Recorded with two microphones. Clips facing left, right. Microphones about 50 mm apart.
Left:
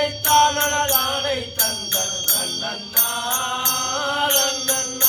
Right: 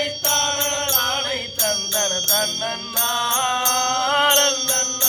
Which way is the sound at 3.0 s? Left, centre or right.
Right.